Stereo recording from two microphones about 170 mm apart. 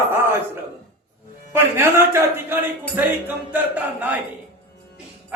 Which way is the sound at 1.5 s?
15° right (ahead or behind).